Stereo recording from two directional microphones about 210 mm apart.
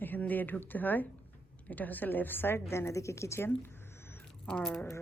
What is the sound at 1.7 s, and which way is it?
Speech, 10° left (ahead or behind).